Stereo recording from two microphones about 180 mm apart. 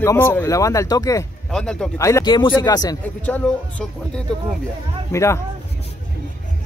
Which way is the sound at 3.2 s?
5° left (ahead or behind).